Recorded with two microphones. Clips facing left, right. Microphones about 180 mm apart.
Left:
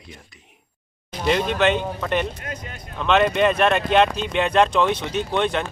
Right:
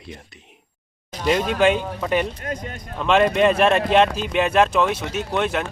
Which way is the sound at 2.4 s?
40° right (ahead or behind).